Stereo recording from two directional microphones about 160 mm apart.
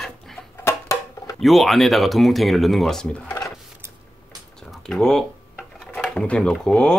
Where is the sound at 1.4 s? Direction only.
Centre (ahead or behind).